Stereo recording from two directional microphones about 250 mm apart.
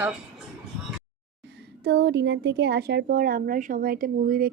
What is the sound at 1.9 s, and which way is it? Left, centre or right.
Speech, right.